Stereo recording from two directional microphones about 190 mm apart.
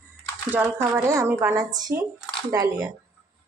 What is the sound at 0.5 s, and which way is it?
A woman's voice, 10° right (ahead or behind).